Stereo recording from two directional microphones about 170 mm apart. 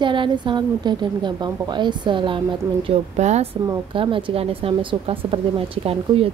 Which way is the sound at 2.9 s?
40° right (ahead or behind).